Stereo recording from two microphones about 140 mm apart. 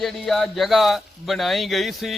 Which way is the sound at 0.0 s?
Centre (ahead or behind).